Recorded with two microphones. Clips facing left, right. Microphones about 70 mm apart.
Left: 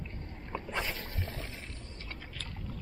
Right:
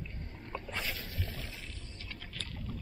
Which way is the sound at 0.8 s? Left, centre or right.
Left.